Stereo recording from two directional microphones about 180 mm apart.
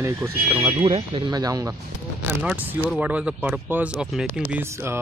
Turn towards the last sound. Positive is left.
turn(degrees=-10)  # may be behind; listen again after turning